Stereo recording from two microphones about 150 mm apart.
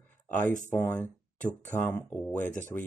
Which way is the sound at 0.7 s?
10° left (ahead or behind).